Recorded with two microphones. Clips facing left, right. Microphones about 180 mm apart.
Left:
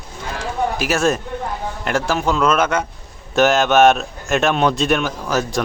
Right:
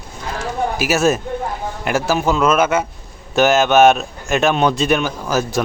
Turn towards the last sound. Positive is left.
turn(degrees=0)  # may be behind; listen again after turning